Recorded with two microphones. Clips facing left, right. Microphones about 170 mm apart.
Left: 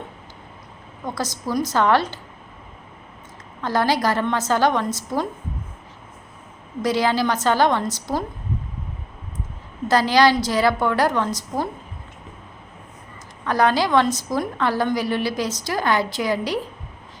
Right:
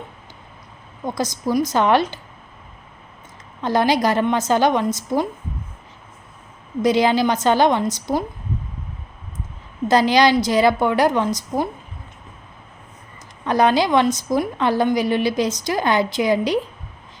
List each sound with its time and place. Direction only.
1.0 s a woman's voice: 15° right (ahead or behind)
3.6 s a woman's voice: 20° right (ahead or behind)
6.8 s a woman's voice: 20° right (ahead or behind)
9.9 s a woman's voice: 20° right (ahead or behind)
13.4 s a woman's voice: 20° right (ahead or behind)